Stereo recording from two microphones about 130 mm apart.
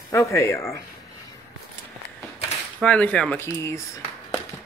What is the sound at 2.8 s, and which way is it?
Speech, 10° left (ahead or behind).